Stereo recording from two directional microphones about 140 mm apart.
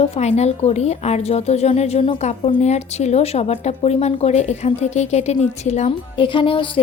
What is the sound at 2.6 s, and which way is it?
A woman's voice, 55° left (ahead or behind).